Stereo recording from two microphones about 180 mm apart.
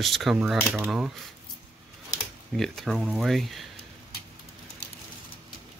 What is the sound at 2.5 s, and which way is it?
Speech, centre (ahead or behind).